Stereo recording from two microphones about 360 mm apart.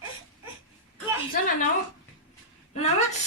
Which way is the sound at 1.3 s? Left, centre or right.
Left.